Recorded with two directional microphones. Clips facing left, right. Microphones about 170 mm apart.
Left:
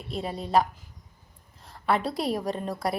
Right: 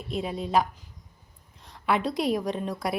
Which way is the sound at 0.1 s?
35° left (ahead or behind).